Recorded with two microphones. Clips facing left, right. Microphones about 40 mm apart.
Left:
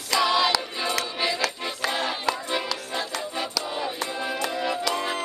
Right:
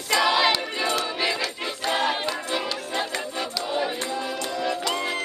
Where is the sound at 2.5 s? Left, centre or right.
Centre.